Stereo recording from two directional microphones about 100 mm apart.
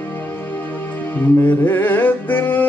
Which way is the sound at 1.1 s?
20° left (ahead or behind).